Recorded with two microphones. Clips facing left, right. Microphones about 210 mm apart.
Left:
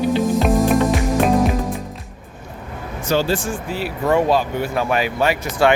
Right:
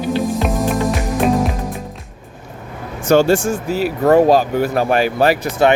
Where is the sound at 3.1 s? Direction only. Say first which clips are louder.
Right 7 dB; 45° right (ahead or behind).